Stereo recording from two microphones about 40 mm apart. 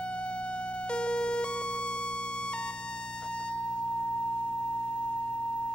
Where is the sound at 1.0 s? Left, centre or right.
Left.